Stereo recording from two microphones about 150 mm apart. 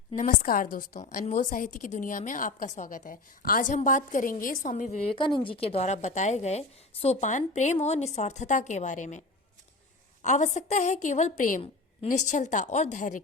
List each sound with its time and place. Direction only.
0.2 s a woman's voice: 60° left (ahead or behind)
5.1 s speech: 35° left (ahead or behind); by 9.2 s 55° left (ahead or behind)
10.2 s a woman's voice: 50° left (ahead or behind)